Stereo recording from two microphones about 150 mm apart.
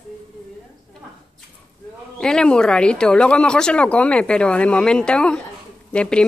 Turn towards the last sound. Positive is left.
turn(degrees=5)  # may be behind; listen again after turning